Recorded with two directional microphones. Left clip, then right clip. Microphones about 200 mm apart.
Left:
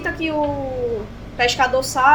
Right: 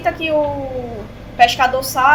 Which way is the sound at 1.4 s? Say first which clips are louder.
Right 4 dB; 25° left (ahead or behind).